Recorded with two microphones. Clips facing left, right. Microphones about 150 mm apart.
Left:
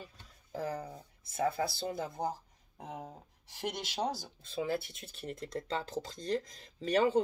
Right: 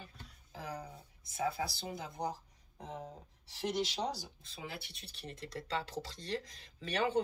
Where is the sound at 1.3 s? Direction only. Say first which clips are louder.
Left 4 dB; 50° left (ahead or behind).